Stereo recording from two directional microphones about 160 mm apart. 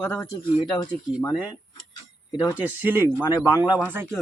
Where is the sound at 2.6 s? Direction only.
15° right (ahead or behind).